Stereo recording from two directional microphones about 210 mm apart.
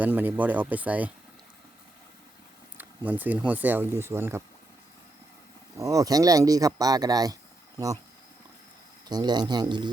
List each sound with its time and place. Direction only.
0.0 s speech: 10° right (ahead or behind)
2.7 s speech: 10° right (ahead or behind)
5.7 s speech: 15° right (ahead or behind)
9.0 s speech: 20° right (ahead or behind)